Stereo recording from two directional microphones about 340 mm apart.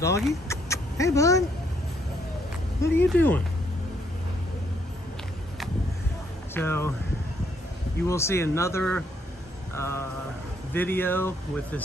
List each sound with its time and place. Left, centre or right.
0.0 s speech: centre
0.5 s a sound: centre
2.8 s speech: centre
6.5 s speech: centre
8.1 s speech: centre